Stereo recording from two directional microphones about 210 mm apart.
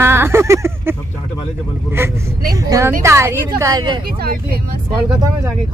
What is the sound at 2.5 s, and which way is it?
Speech, 15° right (ahead or behind).